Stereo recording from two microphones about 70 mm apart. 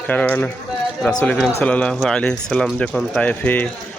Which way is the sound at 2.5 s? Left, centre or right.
Centre.